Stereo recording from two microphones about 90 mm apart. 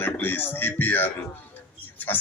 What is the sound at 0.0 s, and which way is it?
A man's voice, 20° left (ahead or behind).